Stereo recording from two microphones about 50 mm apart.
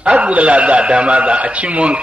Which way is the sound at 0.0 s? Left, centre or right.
Right.